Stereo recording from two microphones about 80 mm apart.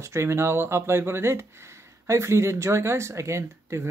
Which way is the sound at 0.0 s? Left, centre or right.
Right.